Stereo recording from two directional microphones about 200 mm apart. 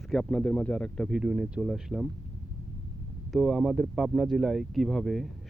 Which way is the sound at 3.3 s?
Centre (ahead or behind).